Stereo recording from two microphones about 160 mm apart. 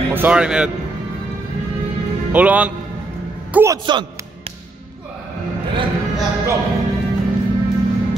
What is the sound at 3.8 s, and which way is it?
Speech, 30° right (ahead or behind).